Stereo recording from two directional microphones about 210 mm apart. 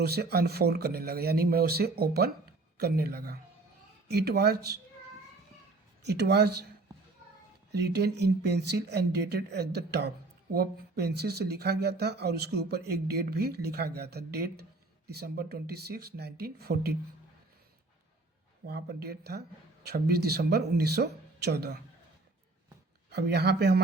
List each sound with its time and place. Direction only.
0.0 s speech: 50° right (ahead or behind)
6.0 s speech: 55° right (ahead or behind)
7.7 s speech: 50° right (ahead or behind)
18.6 s speech: 50° right (ahead or behind)
23.0 s speech: 50° right (ahead or behind)